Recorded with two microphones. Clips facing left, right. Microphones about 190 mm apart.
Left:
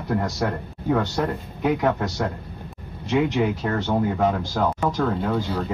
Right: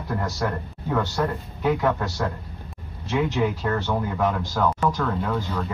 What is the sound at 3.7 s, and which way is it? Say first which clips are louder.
Speech: left 3 dB; 25° left (ahead or behind).